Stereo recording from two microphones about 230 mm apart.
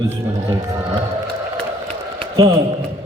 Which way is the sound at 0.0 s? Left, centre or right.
Centre.